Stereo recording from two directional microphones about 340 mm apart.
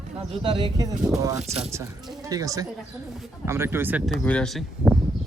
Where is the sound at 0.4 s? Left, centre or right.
Centre.